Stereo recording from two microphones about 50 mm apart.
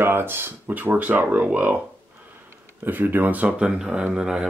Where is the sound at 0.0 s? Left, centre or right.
Right.